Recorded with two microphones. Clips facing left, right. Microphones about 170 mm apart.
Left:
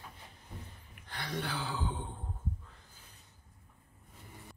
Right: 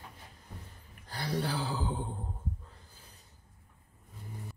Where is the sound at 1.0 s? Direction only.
35° right (ahead or behind).